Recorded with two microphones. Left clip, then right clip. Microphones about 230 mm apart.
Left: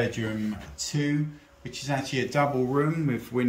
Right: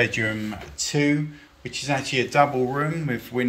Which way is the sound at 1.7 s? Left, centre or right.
Centre.